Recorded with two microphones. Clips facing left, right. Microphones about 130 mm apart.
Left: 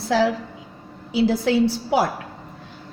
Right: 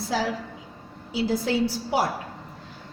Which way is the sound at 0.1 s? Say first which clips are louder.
Left 8 dB; 75° left (ahead or behind).